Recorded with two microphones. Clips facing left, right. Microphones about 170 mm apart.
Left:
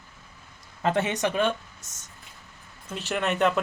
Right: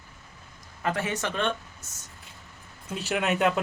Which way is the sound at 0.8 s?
25° left (ahead or behind).